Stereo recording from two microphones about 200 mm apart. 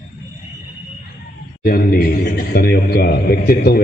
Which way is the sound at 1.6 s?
45° left (ahead or behind).